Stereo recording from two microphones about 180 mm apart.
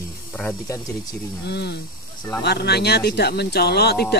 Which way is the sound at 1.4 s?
70° left (ahead or behind).